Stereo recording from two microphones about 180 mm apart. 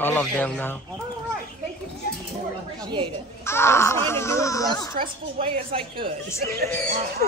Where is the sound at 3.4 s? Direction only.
15° left (ahead or behind).